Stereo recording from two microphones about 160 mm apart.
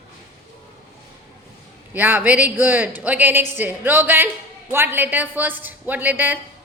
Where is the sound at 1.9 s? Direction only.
10° right (ahead or behind).